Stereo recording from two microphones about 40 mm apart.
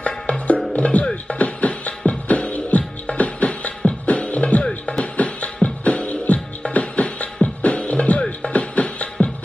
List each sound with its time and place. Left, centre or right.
0.0 s music: left